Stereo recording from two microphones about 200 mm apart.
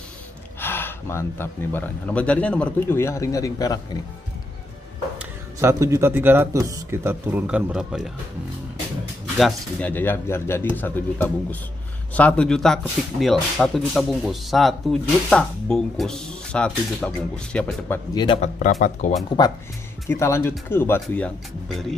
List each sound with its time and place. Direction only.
0.6 s speech: 10° left (ahead or behind)
5.2 s speech: 10° right (ahead or behind)
9.4 s speech: 5° left (ahead or behind)
18.1 s speech: 25° left (ahead or behind)
18.6 s speech: 40° left (ahead or behind)
19.4 s speech: 20° left (ahead or behind); by 21.9 s centre (ahead or behind)